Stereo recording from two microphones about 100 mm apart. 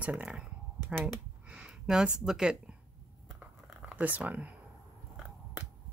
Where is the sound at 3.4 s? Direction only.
10° right (ahead or behind).